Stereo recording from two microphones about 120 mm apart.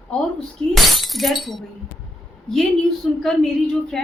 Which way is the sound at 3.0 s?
5° left (ahead or behind).